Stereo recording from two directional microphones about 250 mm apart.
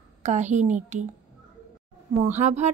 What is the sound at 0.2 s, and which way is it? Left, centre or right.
Speech, right.